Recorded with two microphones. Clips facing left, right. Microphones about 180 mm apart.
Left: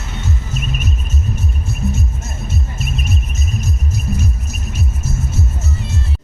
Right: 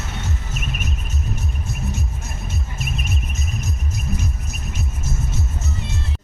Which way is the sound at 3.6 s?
15° right (ahead or behind).